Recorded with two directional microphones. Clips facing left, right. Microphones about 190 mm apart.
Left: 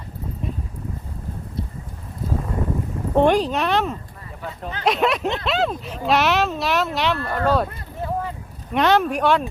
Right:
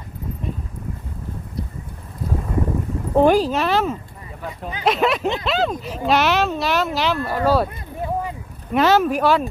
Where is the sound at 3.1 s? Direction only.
Centre (ahead or behind).